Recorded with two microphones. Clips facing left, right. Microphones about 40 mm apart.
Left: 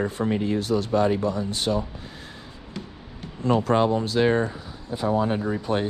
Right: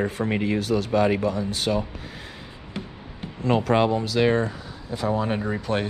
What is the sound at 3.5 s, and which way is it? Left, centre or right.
Speech, right.